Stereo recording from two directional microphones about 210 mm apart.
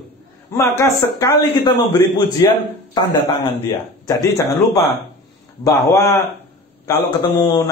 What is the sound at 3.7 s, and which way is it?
A man's voice, 15° left (ahead or behind).